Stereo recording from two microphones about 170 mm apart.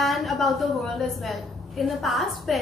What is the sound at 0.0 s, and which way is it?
A woman's voice, centre (ahead or behind).